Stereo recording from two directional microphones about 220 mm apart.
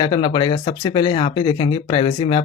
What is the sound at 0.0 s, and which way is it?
Speech, 20° left (ahead or behind).